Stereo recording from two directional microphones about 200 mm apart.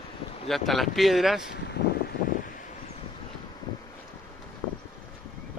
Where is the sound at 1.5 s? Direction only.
55° left (ahead or behind).